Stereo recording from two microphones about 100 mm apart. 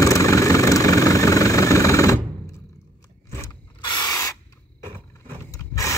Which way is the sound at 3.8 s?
45° left (ahead or behind).